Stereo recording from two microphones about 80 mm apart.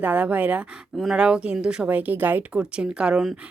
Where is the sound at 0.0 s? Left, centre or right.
Centre.